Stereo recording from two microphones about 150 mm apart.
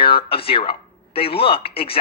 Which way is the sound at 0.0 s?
35° left (ahead or behind).